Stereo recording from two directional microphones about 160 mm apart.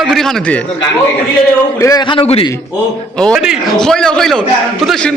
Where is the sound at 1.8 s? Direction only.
25° left (ahead or behind).